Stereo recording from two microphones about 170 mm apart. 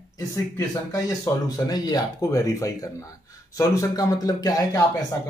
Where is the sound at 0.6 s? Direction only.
20° left (ahead or behind).